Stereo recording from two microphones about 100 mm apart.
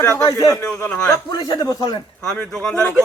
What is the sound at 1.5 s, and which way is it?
Speech, 40° left (ahead or behind).